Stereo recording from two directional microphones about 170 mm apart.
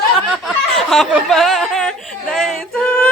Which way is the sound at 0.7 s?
Centre (ahead or behind).